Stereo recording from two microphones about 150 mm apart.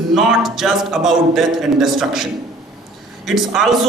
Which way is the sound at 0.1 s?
Centre (ahead or behind).